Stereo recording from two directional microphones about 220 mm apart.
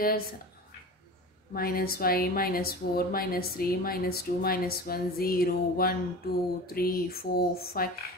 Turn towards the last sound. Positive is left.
turn(degrees=45)  # may be behind; listen again after turning